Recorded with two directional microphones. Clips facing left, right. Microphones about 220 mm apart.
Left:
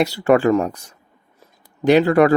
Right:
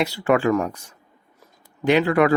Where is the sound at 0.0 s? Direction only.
35° left (ahead or behind).